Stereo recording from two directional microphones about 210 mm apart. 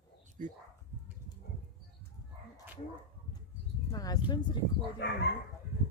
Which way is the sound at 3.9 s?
15° left (ahead or behind).